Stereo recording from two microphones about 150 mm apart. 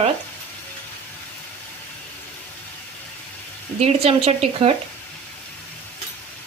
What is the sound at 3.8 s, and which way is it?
Speech, 45° right (ahead or behind).